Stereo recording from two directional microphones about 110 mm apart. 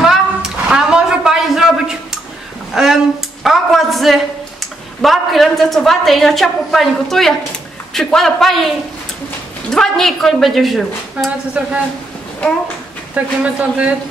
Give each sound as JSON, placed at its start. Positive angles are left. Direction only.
{"t": 0.0, "sound": "a sound", "side_deg": -5}
{"t": 5.0, "sound": "a woman's voice", "side_deg": 0}
{"t": 13.1, "sound": "speech", "side_deg": -10}